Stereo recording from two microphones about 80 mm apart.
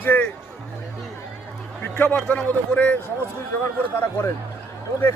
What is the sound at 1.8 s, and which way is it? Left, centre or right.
A man's voice, left.